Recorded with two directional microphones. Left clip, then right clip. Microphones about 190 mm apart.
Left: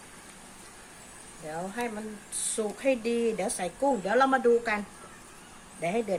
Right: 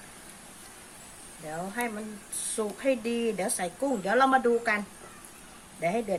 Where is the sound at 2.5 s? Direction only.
5° right (ahead or behind).